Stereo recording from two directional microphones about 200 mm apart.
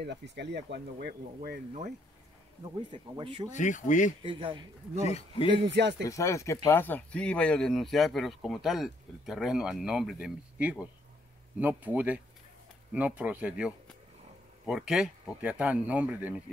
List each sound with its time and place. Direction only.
0.0 s speech: 60° right (ahead or behind)
2.9 s speech: 25° right (ahead or behind)
3.5 s speech: 40° left (ahead or behind)
4.2 s speech: 25° right (ahead or behind)
5.0 s speech: 30° left (ahead or behind)
5.8 s speech: 60° right (ahead or behind)
6.0 s speech: 15° left (ahead or behind); by 16.3 s 5° right (ahead or behind)